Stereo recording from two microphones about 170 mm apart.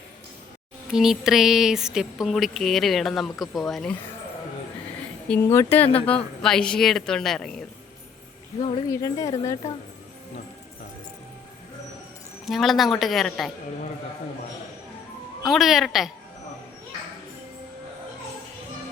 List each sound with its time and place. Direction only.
0.9 s speech: centre (ahead or behind)
5.3 s speech: 15° left (ahead or behind)
8.9 s speech: 20° left (ahead or behind)
12.5 s speech: centre (ahead or behind)
15.4 s speech: centre (ahead or behind)